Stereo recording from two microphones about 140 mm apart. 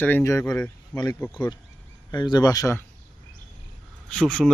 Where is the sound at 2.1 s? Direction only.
30° left (ahead or behind).